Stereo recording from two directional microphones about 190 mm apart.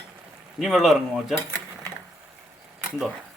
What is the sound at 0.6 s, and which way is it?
Speech, centre (ahead or behind).